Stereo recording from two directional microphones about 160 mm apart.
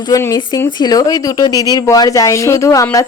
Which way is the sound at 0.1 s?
20° left (ahead or behind).